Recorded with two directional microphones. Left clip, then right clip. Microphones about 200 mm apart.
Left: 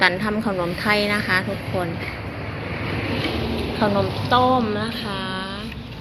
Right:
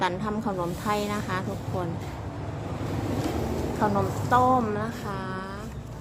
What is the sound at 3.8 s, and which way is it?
A woman's voice, 5° left (ahead or behind).